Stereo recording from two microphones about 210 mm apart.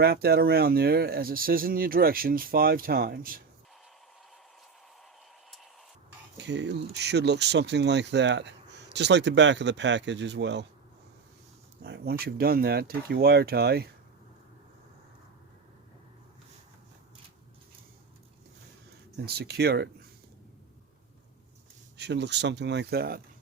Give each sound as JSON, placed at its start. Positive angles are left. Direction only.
{"t": 0.0, "sound": "speech", "side_deg": -50}
{"t": 6.3, "sound": "speech", "side_deg": -55}
{"t": 11.8, "sound": "speech", "side_deg": -50}
{"t": 19.2, "sound": "speech", "side_deg": -50}
{"t": 21.9, "sound": "speech", "side_deg": -55}